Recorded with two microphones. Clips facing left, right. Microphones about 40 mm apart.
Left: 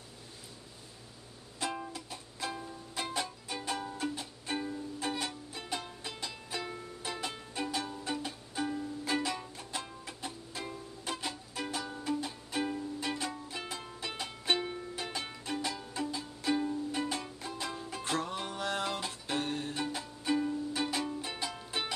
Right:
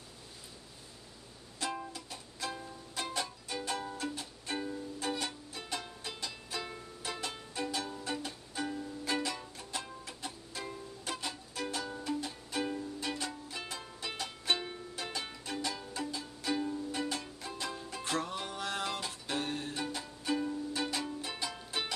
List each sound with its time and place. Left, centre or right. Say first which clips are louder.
1.6 s music: left 1 dB; centre
17.0 s music: left 1 dB; centre
17.5 s music: even; centre